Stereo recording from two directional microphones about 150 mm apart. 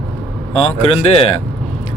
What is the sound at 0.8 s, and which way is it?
Speech, 40° left (ahead or behind).